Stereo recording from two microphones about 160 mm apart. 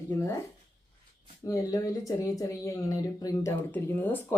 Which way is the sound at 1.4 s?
20° left (ahead or behind).